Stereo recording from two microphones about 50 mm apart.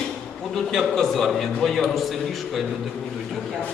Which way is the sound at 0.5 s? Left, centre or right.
Centre.